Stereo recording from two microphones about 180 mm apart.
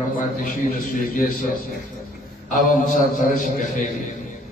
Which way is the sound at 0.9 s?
50° left (ahead or behind).